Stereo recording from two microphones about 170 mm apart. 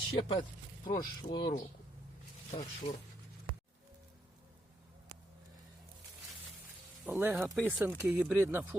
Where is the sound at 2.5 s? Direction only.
40° left (ahead or behind).